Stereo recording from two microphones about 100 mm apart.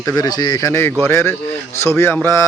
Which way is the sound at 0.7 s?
25° left (ahead or behind).